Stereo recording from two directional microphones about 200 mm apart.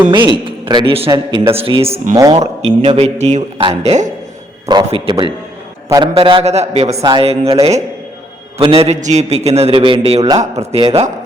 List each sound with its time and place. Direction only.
0.6 s a man's voice: 25° right (ahead or behind)
1.5 s a man's voice: 25° right (ahead or behind)
2.1 s a man's voice: 20° right (ahead or behind)
2.6 s a man's voice: 30° right (ahead or behind)
4.6 s a man's voice: 20° right (ahead or behind)